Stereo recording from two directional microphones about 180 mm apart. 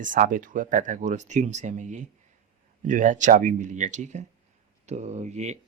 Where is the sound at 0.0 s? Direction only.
45° right (ahead or behind).